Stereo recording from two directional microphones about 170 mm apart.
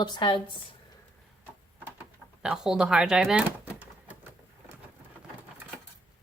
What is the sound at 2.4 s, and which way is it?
Speech, 5° right (ahead or behind).